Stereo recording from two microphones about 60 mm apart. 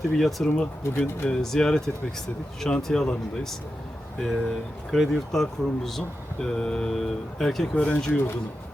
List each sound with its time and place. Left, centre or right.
0.2 s speech: centre
0.4 s speech: centre
7.8 s speech: centre